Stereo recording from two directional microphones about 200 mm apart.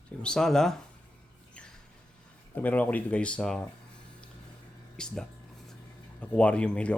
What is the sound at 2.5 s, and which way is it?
Speech, 10° left (ahead or behind).